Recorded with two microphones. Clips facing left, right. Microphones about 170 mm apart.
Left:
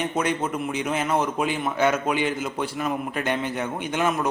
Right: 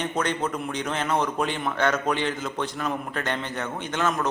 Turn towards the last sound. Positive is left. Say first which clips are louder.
# left 2 dB
turn(degrees=10)  # may be behind; listen again after turning